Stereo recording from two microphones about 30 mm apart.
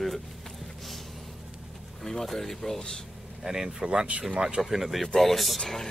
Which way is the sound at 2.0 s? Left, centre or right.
Centre.